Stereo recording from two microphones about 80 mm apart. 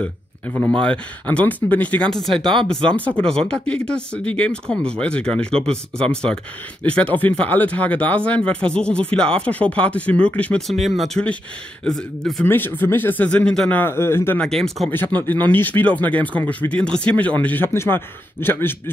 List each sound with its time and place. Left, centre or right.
0.6 s speech: centre
2.0 s speech: centre
11.8 s speech: centre
12.4 s speech: left
13.8 s speech: left
14.4 s speech: centre
14.9 s speech: left